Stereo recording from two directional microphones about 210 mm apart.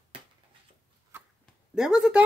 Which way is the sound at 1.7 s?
Centre (ahead or behind).